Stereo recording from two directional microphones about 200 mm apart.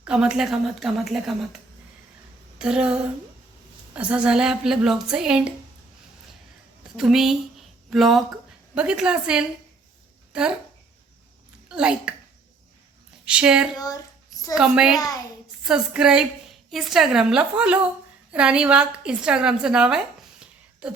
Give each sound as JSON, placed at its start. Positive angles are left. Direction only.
{"t": 0.0, "sound": "speech", "side_deg": -5}
{"t": 2.6, "sound": "speech", "side_deg": -5}
{"t": 6.9, "sound": "speech", "side_deg": 0}
{"t": 11.7, "sound": "speech", "side_deg": -5}
{"t": 13.2, "sound": "speech", "side_deg": -5}
{"t": 13.7, "sound": "speech", "side_deg": 20}
{"t": 14.5, "sound": "speech", "side_deg": -5}
{"t": 14.9, "sound": "speech", "side_deg": 20}
{"t": 15.6, "sound": "a woman's voice", "side_deg": -5}